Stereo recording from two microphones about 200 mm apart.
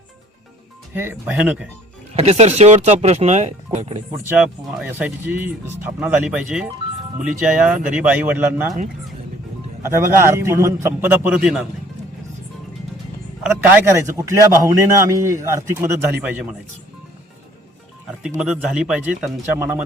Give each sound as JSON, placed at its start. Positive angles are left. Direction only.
{"t": 0.9, "sound": "a man's voice", "side_deg": -10}
{"t": 2.1, "sound": "speech", "side_deg": -35}
{"t": 4.3, "sound": "a man's voice", "side_deg": -5}
{"t": 9.8, "sound": "a man's voice", "side_deg": -10}
{"t": 13.4, "sound": "a man's voice", "side_deg": -10}
{"t": 18.3, "sound": "a man's voice", "side_deg": -5}